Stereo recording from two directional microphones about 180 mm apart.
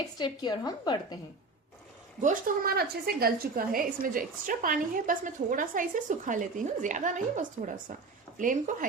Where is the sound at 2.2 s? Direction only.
55° right (ahead or behind).